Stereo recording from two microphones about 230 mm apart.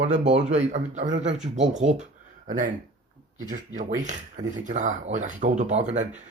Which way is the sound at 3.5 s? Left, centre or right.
Right.